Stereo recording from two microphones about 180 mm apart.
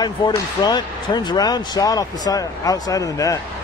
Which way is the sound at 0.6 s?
25° left (ahead or behind).